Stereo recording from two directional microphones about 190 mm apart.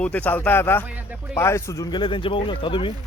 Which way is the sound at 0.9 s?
5° right (ahead or behind).